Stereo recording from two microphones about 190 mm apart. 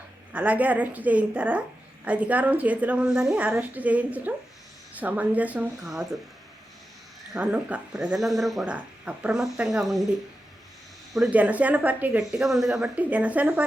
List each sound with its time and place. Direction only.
0.3 s speech: 10° right (ahead or behind)
7.3 s speech: 5° right (ahead or behind)
11.1 s speech: 5° right (ahead or behind)